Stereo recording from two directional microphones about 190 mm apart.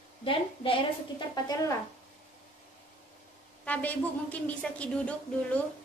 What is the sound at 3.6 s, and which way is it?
A woman's voice, 5° left (ahead or behind).